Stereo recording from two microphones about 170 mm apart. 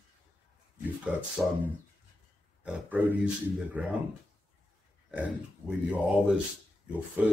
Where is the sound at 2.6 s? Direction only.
10° right (ahead or behind).